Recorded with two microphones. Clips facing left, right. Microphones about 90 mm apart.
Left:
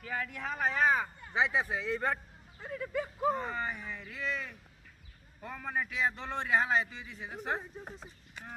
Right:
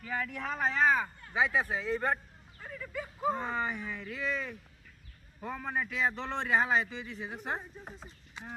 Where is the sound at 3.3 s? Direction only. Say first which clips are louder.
Right 2 dB; centre (ahead or behind).